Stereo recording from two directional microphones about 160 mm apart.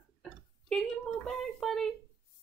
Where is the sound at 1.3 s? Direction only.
Centre (ahead or behind).